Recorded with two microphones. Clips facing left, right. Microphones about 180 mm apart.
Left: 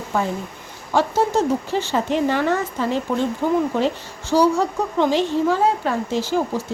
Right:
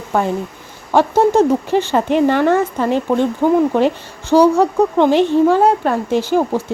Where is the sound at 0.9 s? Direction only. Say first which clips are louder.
Right 6 dB; 60° right (ahead or behind).